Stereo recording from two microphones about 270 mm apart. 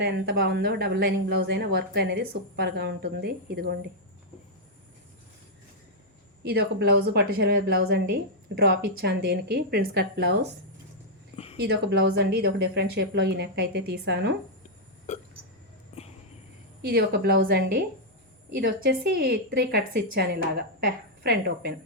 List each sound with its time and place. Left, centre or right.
0.0 s a woman's voice: right
6.4 s a woman's voice: right
11.6 s a woman's voice: right
15.1 s hiccup: left
16.9 s a woman's voice: right